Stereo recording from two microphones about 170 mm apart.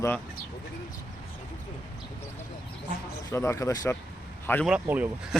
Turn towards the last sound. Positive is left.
turn(degrees=-10)  # may be behind; listen again after turning